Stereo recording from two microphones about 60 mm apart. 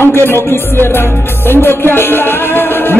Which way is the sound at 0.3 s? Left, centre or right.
Left.